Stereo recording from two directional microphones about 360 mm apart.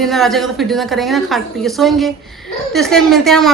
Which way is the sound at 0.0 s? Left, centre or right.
Centre.